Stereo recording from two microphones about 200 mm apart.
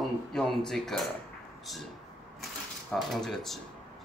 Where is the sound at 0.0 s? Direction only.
Centre (ahead or behind).